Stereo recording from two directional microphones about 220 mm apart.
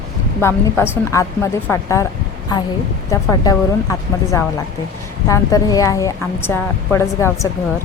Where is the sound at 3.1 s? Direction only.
15° left (ahead or behind).